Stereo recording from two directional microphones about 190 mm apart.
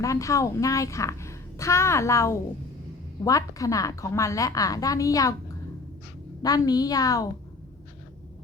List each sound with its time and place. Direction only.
0.0 s a woman's voice: 15° left (ahead or behind)
6.4 s a woman's voice: 20° left (ahead or behind)